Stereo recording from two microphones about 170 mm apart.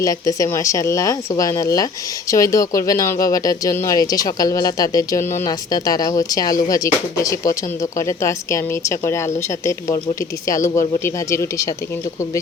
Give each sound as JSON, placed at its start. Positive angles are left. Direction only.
{"t": 0.0, "sound": "speech", "side_deg": 20}